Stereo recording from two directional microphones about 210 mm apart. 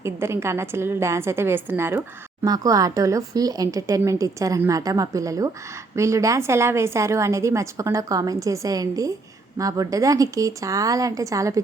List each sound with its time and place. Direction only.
0.0 s a woman's voice: 10° right (ahead or behind)